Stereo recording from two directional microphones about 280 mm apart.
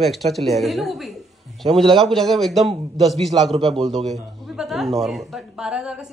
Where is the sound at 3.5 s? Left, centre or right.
Right.